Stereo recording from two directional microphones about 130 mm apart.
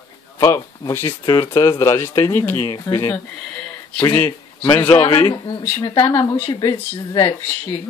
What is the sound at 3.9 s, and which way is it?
A man's voice, 15° left (ahead or behind).